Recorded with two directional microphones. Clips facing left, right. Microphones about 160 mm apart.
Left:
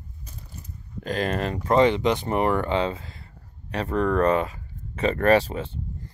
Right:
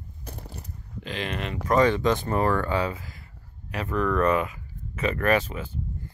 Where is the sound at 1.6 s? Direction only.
20° left (ahead or behind).